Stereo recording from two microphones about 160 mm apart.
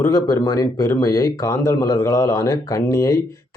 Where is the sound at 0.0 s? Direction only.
20° left (ahead or behind).